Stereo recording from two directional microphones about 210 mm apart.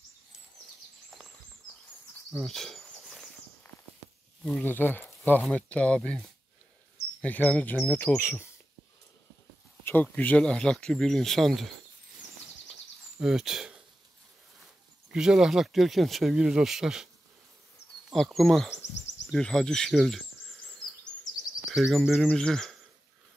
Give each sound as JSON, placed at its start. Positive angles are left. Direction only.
{"t": 2.3, "sound": "walk", "side_deg": 0}
{"t": 4.5, "sound": "speech", "side_deg": 10}
{"t": 9.8, "sound": "speech", "side_deg": 10}
{"t": 13.2, "sound": "speech", "side_deg": 0}
{"t": 15.0, "sound": "speech", "side_deg": -5}
{"t": 18.1, "sound": "speech", "side_deg": 0}
{"t": 21.6, "sound": "speech", "side_deg": 0}